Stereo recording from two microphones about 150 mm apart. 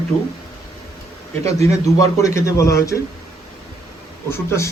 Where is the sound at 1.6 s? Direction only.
20° left (ahead or behind).